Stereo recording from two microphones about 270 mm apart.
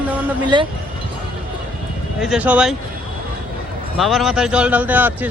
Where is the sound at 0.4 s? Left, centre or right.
Centre.